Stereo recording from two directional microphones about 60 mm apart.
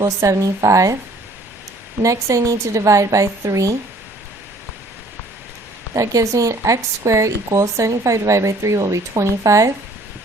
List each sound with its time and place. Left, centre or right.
0.0 s a woman's voice: right
2.0 s a woman's voice: right
5.9 s a woman's voice: right